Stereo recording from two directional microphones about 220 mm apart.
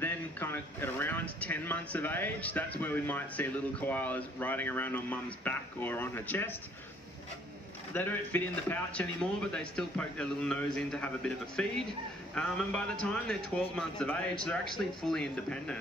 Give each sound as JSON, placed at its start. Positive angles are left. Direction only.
{"t": 0.0, "sound": "speech", "side_deg": 10}
{"t": 7.9, "sound": "a man's voice", "side_deg": 10}